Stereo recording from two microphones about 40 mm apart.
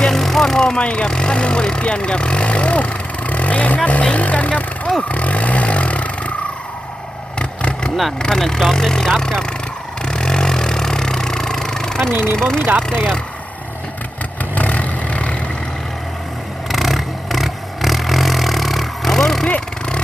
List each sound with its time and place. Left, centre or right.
0.0 s vehicle: centre
0.9 s speech: left
5.0 s a sound: left
7.3 s vehicle: left
8.2 s speech: centre
10.1 s vehicle: centre
12.1 s speech: right
12.4 s speech: centre
14.5 s vehicle: left
16.6 s vehicle: centre
19.5 s vehicle: left